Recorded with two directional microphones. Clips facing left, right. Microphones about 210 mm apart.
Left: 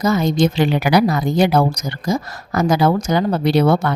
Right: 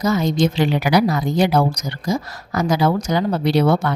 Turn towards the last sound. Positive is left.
turn(degrees=55)  # may be behind; listen again after turning